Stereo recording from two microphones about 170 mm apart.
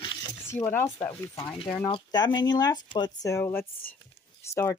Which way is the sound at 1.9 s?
25° left (ahead or behind).